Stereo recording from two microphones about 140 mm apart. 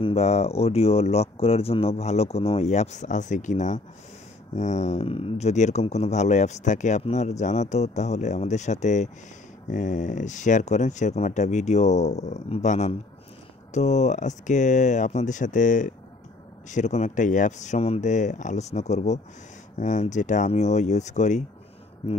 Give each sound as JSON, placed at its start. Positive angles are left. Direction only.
{"t": 0.0, "sound": "speech", "side_deg": 50}